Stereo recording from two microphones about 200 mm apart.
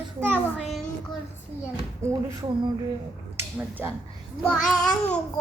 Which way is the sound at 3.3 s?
10° right (ahead or behind).